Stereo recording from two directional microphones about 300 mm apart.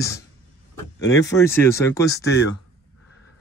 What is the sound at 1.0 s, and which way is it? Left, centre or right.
Speech, centre.